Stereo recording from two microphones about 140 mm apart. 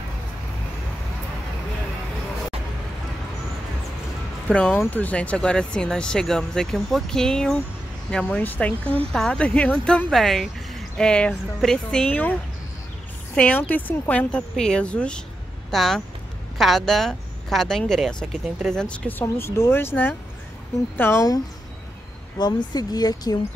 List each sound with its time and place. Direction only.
4.5 s speech: 5° left (ahead or behind)
22.4 s speech: 30° left (ahead or behind)